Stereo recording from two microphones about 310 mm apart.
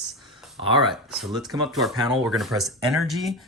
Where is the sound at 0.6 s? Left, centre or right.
Centre.